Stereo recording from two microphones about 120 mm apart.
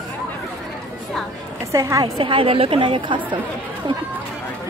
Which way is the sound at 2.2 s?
45° right (ahead or behind).